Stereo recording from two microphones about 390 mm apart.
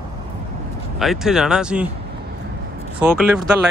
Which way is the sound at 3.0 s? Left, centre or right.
Centre.